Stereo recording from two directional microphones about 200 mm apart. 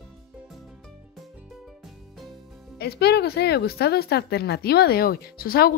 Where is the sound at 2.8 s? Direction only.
55° left (ahead or behind).